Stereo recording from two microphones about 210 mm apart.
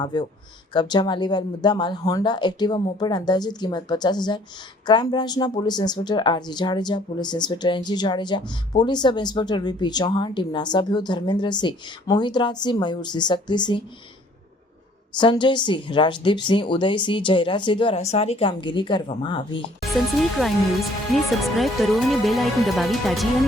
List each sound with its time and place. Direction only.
0.0 s a woman's voice: 20° left (ahead or behind)
15.2 s a woman's voice: 20° left (ahead or behind)
20.4 s speech: 5° right (ahead or behind)